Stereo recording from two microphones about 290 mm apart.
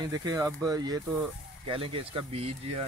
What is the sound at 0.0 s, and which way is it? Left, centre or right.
Speech, centre.